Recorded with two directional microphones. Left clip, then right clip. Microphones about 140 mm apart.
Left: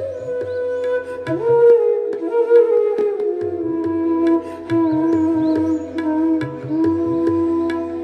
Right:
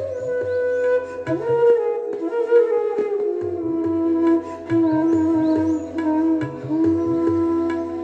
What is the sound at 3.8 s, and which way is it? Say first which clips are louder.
Music: left 1 dB; 20° left (ahead or behind).